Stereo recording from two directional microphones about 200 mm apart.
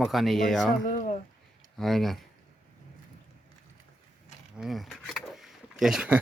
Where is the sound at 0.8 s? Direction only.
40° left (ahead or behind).